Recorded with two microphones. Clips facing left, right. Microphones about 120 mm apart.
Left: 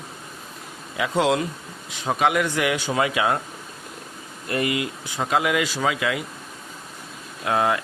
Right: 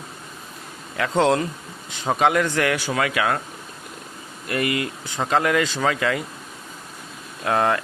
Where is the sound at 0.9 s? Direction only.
10° left (ahead or behind).